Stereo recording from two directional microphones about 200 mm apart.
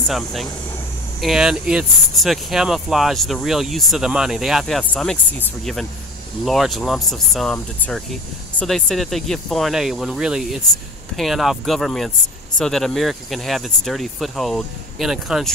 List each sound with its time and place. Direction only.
0.1 s speech: centre (ahead or behind)
6.4 s speech: centre (ahead or behind)